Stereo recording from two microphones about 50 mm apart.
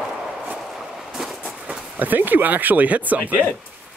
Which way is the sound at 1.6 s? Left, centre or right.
Right.